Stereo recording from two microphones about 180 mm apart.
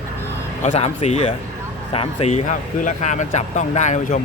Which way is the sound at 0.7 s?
35° left (ahead or behind).